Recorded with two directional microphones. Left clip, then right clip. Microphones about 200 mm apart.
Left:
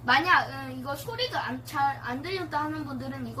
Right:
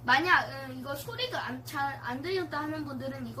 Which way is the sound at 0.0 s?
15° right (ahead or behind).